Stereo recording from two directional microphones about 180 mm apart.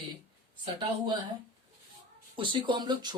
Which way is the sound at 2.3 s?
30° right (ahead or behind).